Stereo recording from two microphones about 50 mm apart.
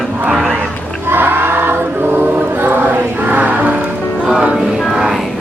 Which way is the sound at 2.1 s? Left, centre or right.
Right.